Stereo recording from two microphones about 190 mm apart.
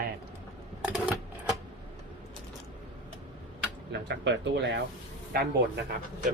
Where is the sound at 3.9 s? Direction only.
60° right (ahead or behind).